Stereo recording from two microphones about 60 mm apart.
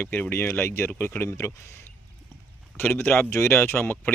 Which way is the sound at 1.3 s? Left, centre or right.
Left.